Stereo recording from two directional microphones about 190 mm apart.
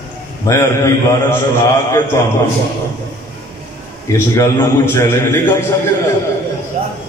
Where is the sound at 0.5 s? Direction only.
15° left (ahead or behind).